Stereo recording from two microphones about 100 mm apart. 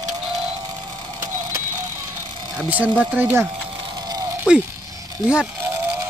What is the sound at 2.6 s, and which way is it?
Speech, 15° right (ahead or behind).